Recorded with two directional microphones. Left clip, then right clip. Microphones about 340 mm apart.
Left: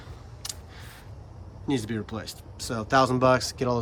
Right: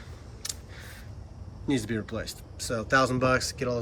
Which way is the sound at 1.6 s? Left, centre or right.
Centre.